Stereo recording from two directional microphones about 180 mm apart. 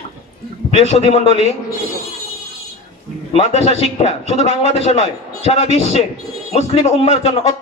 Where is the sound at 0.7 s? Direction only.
35° left (ahead or behind).